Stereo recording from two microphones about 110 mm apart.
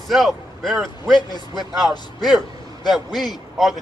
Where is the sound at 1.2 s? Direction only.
40° left (ahead or behind).